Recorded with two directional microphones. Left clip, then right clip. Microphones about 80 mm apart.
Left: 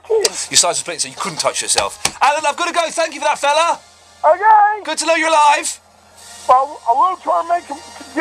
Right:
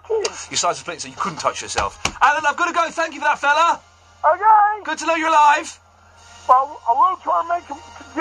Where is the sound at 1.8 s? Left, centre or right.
Left.